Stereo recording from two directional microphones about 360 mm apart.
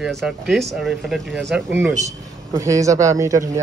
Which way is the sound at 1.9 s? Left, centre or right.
Centre.